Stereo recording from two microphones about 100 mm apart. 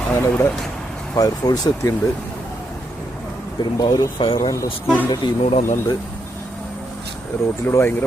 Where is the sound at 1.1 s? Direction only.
40° left (ahead or behind).